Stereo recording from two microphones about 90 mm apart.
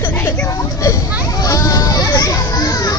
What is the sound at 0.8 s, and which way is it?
Children playing, 40° left (ahead or behind).